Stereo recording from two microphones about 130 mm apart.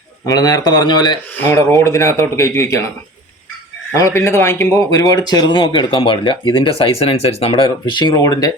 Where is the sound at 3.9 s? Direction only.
20° left (ahead or behind).